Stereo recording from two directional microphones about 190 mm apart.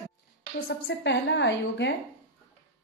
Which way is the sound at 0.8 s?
65° left (ahead or behind).